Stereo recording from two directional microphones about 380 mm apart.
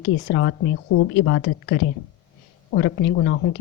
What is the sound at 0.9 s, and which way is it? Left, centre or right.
Speech, left.